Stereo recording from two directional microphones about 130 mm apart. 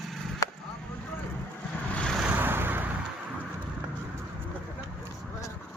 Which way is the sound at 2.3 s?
15° right (ahead or behind).